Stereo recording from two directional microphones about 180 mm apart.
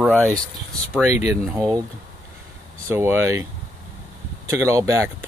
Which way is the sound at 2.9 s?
15° right (ahead or behind).